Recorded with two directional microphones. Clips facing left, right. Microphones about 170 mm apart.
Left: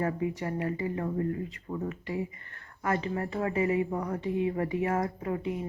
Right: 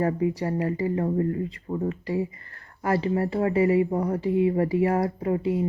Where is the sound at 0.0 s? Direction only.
35° right (ahead or behind).